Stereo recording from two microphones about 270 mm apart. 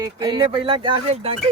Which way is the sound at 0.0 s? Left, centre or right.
Centre.